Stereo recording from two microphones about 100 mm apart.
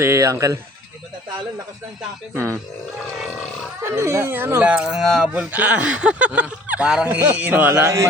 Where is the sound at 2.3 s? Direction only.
25° right (ahead or behind).